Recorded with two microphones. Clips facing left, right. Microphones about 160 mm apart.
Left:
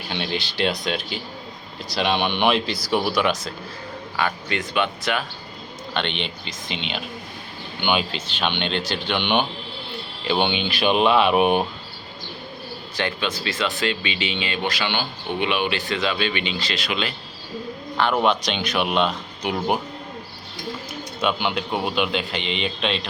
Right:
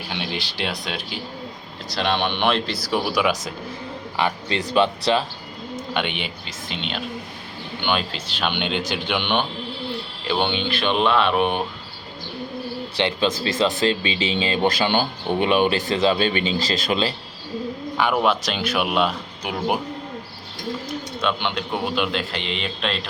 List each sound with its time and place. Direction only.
0.1 s speech: 5° right (ahead or behind)
3.1 s speech: 5° right (ahead or behind)
4.2 s speech: 25° right (ahead or behind)
5.9 s speech: 10° right (ahead or behind); by 11.6 s 15° left (ahead or behind)
13.0 s speech: 30° right (ahead or behind)
17.9 s speech: 5° right (ahead or behind)
21.2 s speech: 5° left (ahead or behind)